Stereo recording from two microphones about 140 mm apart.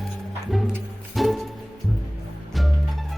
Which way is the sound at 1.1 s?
Centre (ahead or behind).